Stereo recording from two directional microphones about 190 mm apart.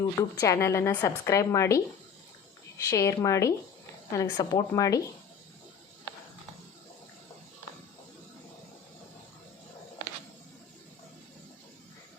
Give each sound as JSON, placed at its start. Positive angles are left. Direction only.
{"t": 0.0, "sound": "a woman's voice", "side_deg": 15}